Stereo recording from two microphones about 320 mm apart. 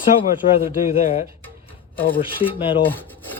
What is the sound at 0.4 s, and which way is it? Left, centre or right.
Speech, left.